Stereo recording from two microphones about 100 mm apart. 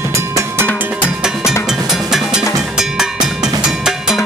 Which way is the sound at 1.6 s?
5° right (ahead or behind).